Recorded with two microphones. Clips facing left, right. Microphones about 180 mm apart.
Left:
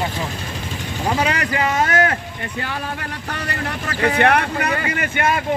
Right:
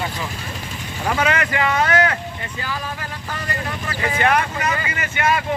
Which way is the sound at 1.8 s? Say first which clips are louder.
Even; 45° left (ahead or behind).